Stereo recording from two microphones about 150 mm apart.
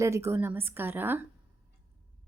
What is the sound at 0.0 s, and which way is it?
A woman's voice, 20° right (ahead or behind).